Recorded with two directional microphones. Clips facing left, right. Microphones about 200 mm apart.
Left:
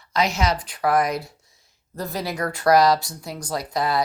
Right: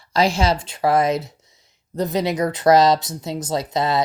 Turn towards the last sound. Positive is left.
turn(degrees=-25)  # may be behind; listen again after turning